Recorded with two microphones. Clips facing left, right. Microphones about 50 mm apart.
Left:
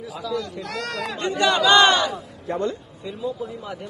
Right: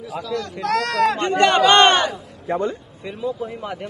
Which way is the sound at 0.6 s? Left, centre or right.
Right.